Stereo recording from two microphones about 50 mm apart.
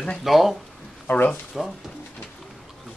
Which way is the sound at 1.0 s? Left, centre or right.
Left.